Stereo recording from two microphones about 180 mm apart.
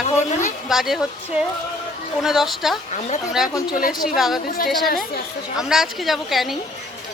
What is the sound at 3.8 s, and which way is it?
Speech, 50° left (ahead or behind).